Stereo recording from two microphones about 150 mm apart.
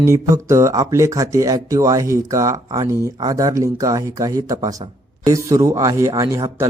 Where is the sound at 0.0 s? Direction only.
20° right (ahead or behind).